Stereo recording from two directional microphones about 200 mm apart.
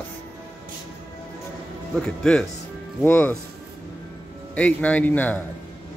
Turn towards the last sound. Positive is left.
turn(degrees=10)  # may be behind; listen again after turning